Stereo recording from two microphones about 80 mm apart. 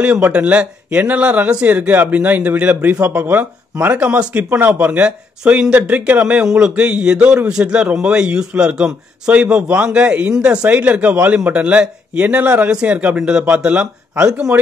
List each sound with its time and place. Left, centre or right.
0.0 s speech: centre